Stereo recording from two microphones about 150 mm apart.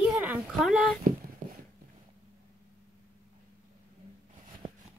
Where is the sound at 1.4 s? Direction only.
90° right.